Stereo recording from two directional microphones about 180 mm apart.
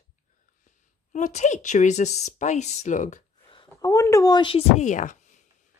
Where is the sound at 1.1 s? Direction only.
40° left (ahead or behind).